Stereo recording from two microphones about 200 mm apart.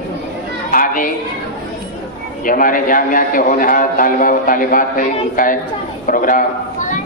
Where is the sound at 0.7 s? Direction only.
45° left (ahead or behind).